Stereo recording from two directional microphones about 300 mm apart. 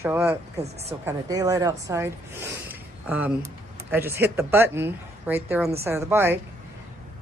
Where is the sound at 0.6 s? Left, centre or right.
Right.